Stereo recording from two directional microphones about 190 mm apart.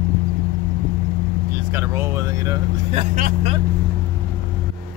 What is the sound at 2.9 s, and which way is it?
Speech, 40° right (ahead or behind).